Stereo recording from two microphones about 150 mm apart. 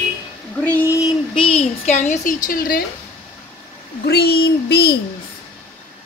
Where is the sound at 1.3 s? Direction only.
40° left (ahead or behind); by 2.8 s 75° left (ahead or behind).